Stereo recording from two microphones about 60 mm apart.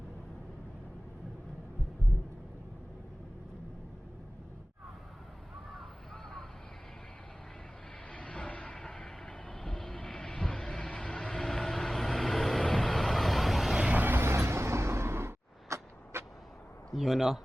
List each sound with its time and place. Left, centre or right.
8.1 s vehicle: centre
13.9 s vehicle: right
16.9 s speech: centre